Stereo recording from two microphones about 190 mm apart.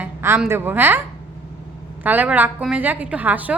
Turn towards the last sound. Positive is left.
turn(degrees=-10)  # may be behind; listen again after turning